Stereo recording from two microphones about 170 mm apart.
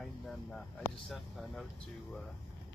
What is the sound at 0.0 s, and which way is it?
Speech, centre (ahead or behind).